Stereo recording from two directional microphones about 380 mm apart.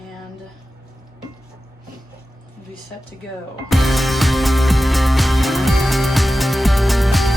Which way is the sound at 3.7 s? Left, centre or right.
Centre.